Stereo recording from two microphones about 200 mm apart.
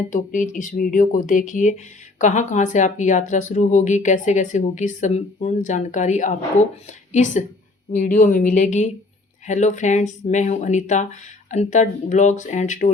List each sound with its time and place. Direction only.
0.1 s speech: 40° left (ahead or behind)